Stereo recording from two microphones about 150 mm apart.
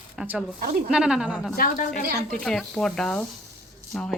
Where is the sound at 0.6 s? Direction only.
75° right (ahead or behind).